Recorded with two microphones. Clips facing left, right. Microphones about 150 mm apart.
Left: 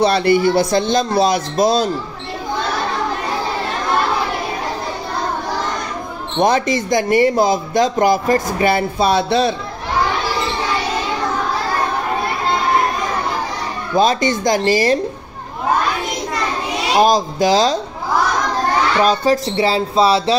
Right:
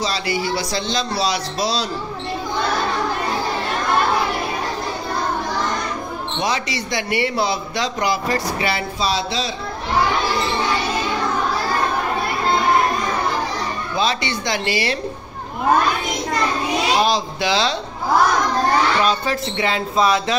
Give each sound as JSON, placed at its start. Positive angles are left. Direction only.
{"t": 0.0, "sound": "speech", "side_deg": 55}
{"t": 6.4, "sound": "speech", "side_deg": 50}
{"t": 13.9, "sound": "speech", "side_deg": 45}
{"t": 17.0, "sound": "speech", "side_deg": 45}
{"t": 19.0, "sound": "speech", "side_deg": 40}